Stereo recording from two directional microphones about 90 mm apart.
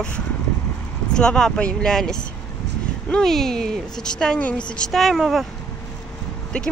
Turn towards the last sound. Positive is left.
turn(degrees=10)  # may be behind; listen again after turning